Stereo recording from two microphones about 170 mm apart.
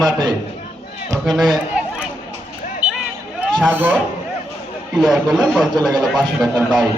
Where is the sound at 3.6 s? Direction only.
10° right (ahead or behind).